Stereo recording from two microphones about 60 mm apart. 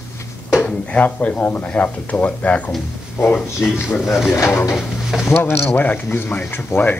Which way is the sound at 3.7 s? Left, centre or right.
Left.